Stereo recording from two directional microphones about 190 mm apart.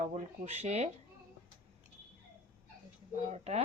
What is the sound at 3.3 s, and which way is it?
Speech, 35° right (ahead or behind).